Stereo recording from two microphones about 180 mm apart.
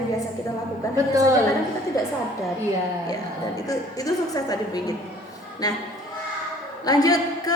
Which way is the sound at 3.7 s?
20° left (ahead or behind).